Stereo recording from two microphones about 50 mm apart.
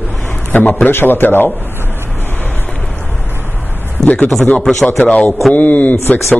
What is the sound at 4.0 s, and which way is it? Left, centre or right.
Speech, centre.